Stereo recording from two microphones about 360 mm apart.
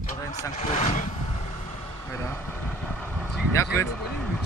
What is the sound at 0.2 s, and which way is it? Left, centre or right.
Speech, centre.